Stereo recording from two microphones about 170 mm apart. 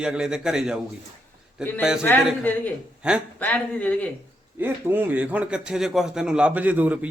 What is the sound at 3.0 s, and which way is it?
Speech, 5° right (ahead or behind).